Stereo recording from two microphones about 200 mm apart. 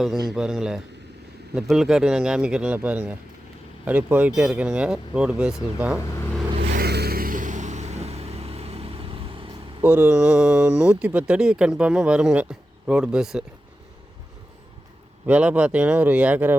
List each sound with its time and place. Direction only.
0.0 s speech: centre (ahead or behind)
6.6 s vehicle: 55° right (ahead or behind); by 9.5 s 25° right (ahead or behind)
9.8 s speech: 5° right (ahead or behind)
15.3 s speech: 5° right (ahead or behind)